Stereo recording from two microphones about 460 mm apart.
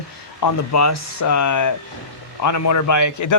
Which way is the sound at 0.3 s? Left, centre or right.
Left.